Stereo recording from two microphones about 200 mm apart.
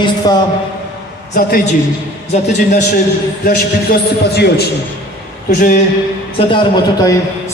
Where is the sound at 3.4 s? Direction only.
50° left (ahead or behind).